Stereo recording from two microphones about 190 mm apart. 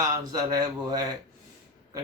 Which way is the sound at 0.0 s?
20° right (ahead or behind).